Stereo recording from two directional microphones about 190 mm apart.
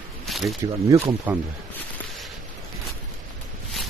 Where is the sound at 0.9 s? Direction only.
15° right (ahead or behind).